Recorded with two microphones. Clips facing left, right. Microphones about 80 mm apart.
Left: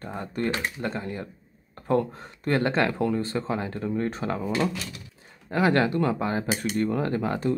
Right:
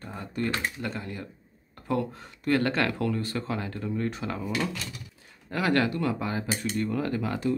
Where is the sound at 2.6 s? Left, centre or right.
Left.